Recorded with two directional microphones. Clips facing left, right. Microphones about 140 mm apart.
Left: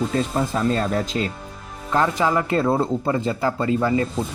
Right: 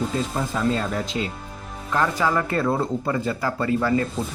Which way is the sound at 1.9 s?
20° left (ahead or behind).